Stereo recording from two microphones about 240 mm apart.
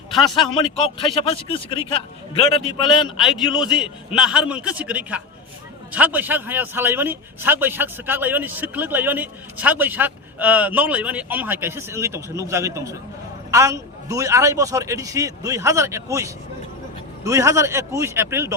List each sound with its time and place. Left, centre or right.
0.3 s speech: centre
3.2 s a man's voice: centre